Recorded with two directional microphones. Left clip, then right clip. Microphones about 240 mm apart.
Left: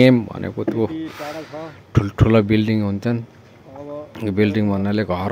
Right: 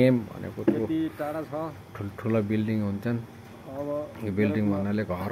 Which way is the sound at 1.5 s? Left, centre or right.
Centre.